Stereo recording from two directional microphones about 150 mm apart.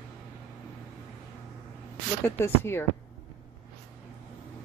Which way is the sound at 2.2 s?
15° left (ahead or behind).